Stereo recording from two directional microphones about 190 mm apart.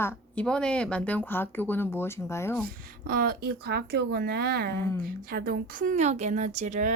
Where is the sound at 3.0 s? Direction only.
50° right (ahead or behind).